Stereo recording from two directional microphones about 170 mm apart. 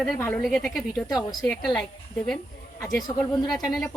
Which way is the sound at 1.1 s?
25° left (ahead or behind).